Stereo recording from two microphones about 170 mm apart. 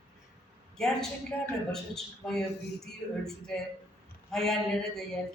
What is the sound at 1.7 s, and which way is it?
Speech, 5° left (ahead or behind).